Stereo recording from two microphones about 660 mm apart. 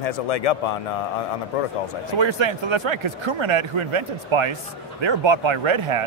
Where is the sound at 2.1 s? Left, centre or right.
Right.